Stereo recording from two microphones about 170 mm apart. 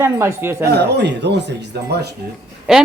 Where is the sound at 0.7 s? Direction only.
80° right.